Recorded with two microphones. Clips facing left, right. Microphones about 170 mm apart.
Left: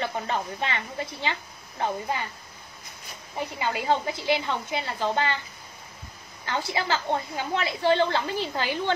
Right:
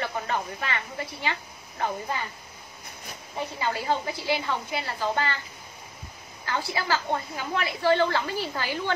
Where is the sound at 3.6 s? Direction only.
20° left (ahead or behind).